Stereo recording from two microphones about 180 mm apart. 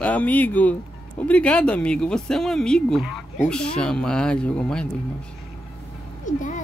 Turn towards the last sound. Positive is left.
turn(degrees=45)  # may be behind; listen again after turning